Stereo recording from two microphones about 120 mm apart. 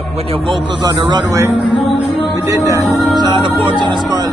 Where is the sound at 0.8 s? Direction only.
35° right (ahead or behind).